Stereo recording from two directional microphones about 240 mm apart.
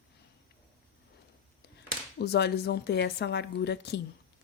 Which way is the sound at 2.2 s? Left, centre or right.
Left.